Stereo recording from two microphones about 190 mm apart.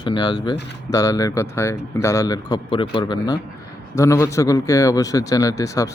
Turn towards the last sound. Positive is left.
turn(degrees=15)  # may be behind; listen again after turning